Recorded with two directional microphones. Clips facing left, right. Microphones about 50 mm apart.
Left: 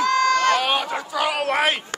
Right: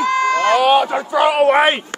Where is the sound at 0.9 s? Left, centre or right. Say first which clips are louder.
Right 8 dB; right.